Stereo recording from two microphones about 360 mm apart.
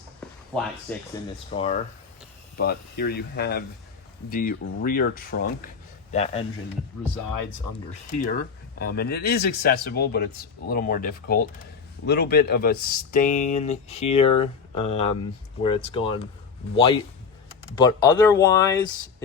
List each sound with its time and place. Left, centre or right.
0.9 s speech: centre
1.5 s speech: centre
8.1 s speech: left